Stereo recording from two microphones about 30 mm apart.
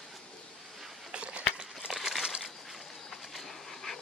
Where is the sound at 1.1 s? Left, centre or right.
Right.